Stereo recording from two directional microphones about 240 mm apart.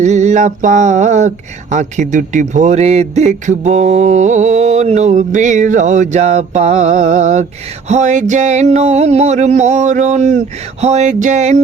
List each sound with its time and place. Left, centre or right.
0.0 s a man's voice: right